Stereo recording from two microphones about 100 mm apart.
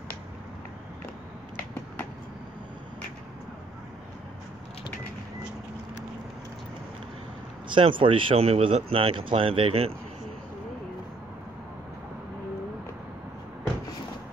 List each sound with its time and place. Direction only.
7.7 s speech: 60° right (ahead or behind); by 9.9 s 80° right